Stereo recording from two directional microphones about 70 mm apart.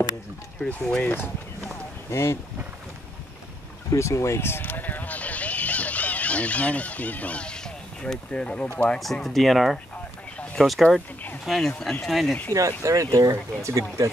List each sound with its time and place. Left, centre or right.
0.7 s speech: centre
2.0 s speech: left
3.9 s speech: left; by 9.0 s centre
9.0 s speech: centre
12.5 s speech: right